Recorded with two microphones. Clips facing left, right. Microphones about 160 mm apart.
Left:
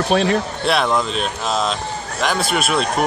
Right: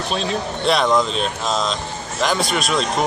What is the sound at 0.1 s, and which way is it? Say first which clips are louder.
Speech: left 7 dB; 60° left (ahead or behind).